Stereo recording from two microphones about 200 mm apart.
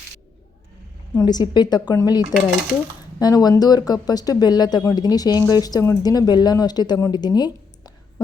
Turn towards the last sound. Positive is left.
turn(degrees=20)  # may be behind; listen again after turning